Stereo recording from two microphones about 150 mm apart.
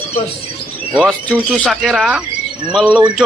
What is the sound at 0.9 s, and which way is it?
Speech, 5° right (ahead or behind).